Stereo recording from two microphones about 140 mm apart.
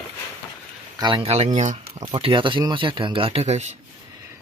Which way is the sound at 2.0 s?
35° right (ahead or behind).